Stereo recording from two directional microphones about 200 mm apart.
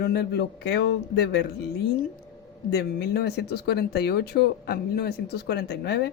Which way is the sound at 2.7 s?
55° left (ahead or behind).